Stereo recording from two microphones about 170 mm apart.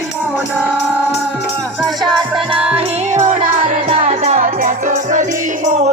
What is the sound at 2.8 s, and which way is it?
Music, 40° right (ahead or behind).